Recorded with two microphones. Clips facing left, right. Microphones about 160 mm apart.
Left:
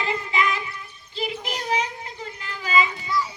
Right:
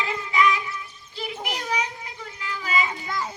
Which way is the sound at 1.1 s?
25° left (ahead or behind).